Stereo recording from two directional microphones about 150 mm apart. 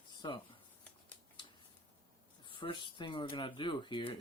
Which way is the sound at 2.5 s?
35° left (ahead or behind).